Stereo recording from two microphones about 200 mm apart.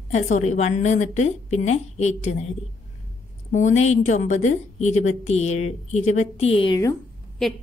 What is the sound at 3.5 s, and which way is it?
A woman's voice, 35° left (ahead or behind).